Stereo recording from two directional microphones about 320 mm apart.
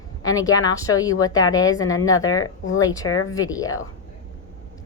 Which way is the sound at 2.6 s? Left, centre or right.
Left.